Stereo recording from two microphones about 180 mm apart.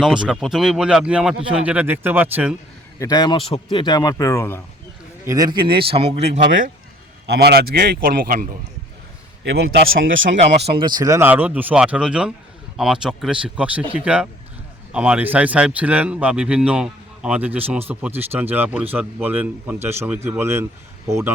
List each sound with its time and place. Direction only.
0.0 s speech: 5° right (ahead or behind)
3.0 s speech: 20° left (ahead or behind)
5.2 s a man's voice: 20° right (ahead or behind); by 6.4 s 35° right (ahead or behind)
7.4 s speech: 60° right (ahead or behind)
9.4 s a man's voice: 90° right
10.8 s a man's voice: 25° right (ahead or behind)